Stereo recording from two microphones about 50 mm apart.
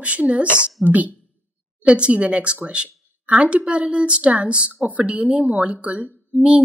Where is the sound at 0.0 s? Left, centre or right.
Right.